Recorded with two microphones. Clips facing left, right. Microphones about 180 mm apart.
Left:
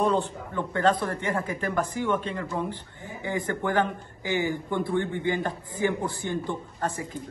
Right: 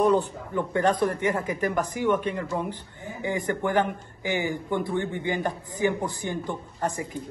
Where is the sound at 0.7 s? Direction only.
15° right (ahead or behind).